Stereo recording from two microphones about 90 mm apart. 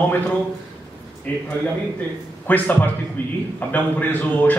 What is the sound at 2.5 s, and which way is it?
Speech, 20° left (ahead or behind).